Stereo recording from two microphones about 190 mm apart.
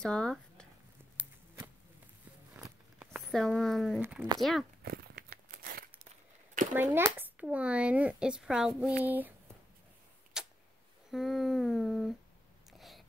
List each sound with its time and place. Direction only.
0.0 s speech: 5° left (ahead or behind)
2.5 s walk: 10° right (ahead or behind)
3.1 s speech: centre (ahead or behind)
4.0 s speech: 10° right (ahead or behind)
4.4 s humming: centre (ahead or behind)
4.8 s a sound: 50° right (ahead or behind)
6.7 s speech: 10° right (ahead or behind)
10.4 s a sound: 5° right (ahead or behind)
11.1 s humming: centre (ahead or behind)
12.7 s biting: centre (ahead or behind)